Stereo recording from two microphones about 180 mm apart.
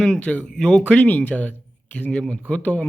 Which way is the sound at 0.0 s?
5° left (ahead or behind).